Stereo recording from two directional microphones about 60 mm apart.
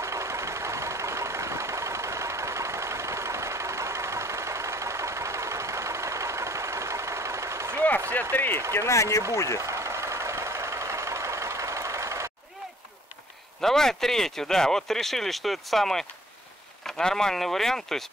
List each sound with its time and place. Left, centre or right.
0.0 s vehicle: right
8.1 s speech: left
8.7 s speech: left
9.6 s vehicle: right
13.6 s speech: centre